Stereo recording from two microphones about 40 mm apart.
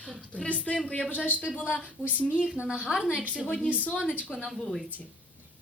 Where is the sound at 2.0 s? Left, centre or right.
Right.